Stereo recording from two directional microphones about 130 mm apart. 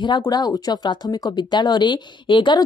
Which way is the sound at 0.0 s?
35° left (ahead or behind).